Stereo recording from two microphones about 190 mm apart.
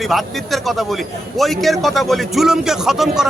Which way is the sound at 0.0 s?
Centre (ahead or behind).